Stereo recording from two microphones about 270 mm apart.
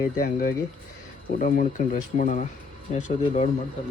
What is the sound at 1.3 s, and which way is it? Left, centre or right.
Speech, left.